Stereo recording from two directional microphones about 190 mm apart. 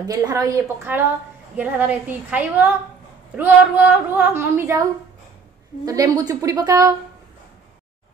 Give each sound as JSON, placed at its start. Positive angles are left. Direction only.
{"t": 0.0, "sound": "a woman's voice", "side_deg": -20}
{"t": 5.9, "sound": "a woman's voice", "side_deg": -20}